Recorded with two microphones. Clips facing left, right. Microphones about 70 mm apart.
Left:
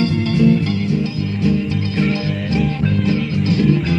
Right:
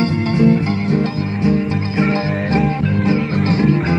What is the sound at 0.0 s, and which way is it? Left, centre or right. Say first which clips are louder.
Music: right 1 dB; right.